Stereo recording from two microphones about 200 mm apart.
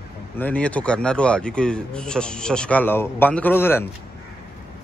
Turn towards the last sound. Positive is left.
turn(degrees=10)  # may be behind; listen again after turning